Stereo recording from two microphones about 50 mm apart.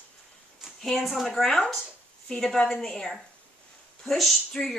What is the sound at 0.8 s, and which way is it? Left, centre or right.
Speech, centre.